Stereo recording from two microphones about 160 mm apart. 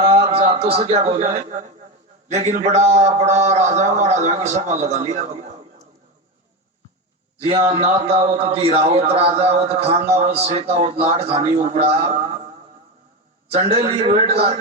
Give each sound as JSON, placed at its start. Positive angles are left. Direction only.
{"t": 0.3, "sound": "a man's voice", "side_deg": -35}
{"t": 7.3, "sound": "a man's voice", "side_deg": -40}
{"t": 13.5, "sound": "a man's voice", "side_deg": -40}